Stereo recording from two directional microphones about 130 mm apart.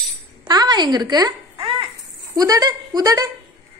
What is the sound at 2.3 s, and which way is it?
A woman's voice, 25° right (ahead or behind).